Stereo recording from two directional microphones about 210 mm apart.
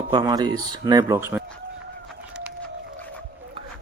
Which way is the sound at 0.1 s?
20° right (ahead or behind).